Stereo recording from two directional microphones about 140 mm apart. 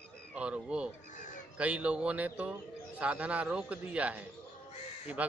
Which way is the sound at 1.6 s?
10° right (ahead or behind).